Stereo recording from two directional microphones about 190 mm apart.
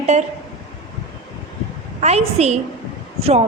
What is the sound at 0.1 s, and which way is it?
Speech, 35° right (ahead or behind).